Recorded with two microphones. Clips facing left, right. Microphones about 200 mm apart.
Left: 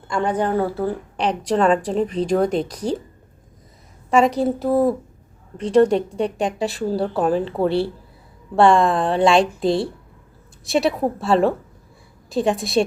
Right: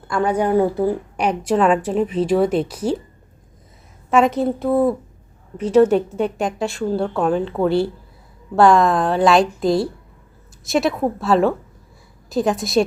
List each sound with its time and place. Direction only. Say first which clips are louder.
0.2 s a woman's voice: right 3 dB; 10° right (ahead or behind)
4.1 s a woman's voice: even; centre (ahead or behind)
9.4 s a woman's voice: right 1 dB; 30° left (ahead or behind)
10.7 s a woman's voice: even; centre (ahead or behind)